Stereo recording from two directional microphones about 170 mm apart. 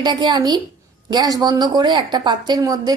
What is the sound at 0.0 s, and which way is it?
A woman's voice, 25° right (ahead or behind).